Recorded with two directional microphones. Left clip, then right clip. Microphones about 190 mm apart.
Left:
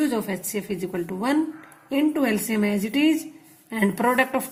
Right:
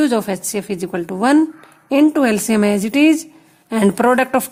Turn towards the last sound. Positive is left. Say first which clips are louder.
# right 7 dB
turn(degrees=-50)  # may be behind; listen again after turning